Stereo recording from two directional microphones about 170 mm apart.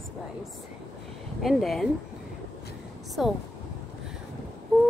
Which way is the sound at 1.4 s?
Centre (ahead or behind).